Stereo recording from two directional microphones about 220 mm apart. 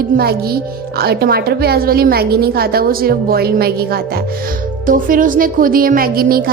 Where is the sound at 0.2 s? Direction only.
45° right (ahead or behind).